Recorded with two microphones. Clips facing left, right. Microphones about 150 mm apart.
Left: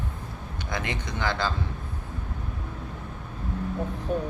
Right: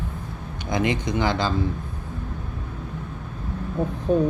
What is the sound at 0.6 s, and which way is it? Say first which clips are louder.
Speech: right 9 dB; 15° right (ahead or behind).